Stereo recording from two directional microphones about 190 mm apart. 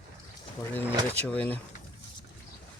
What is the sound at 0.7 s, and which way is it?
Speech, 10° left (ahead or behind).